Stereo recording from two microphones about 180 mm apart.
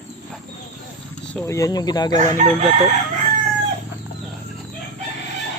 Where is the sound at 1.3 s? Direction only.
5° left (ahead or behind).